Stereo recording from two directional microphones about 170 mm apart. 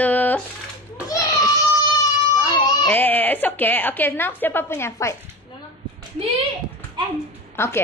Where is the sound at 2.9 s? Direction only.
10° left (ahead or behind).